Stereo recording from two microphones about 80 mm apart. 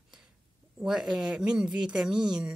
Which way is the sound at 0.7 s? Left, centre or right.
Centre.